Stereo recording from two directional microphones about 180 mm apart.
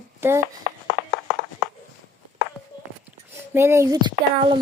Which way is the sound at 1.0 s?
Centre (ahead or behind).